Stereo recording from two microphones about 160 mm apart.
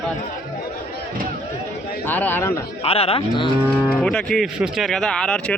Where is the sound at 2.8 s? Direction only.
40° left (ahead or behind).